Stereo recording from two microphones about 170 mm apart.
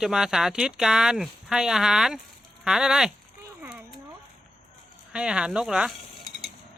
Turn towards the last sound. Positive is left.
turn(degrees=0)  # may be behind; listen again after turning